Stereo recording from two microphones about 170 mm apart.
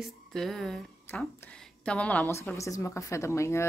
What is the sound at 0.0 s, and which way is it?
A woman's voice, centre (ahead or behind).